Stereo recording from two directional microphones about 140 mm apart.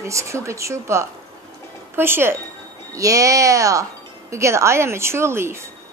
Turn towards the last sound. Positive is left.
turn(degrees=-20)  # may be behind; listen again after turning